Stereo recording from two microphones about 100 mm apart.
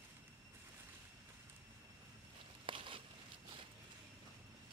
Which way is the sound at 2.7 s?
60° right (ahead or behind).